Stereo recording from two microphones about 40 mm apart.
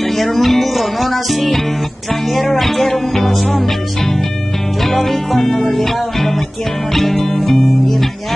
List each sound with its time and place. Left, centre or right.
0.0 s music: centre